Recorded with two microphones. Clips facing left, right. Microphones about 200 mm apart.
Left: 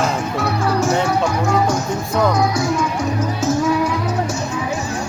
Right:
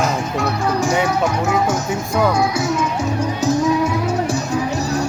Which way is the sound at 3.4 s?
25° right (ahead or behind).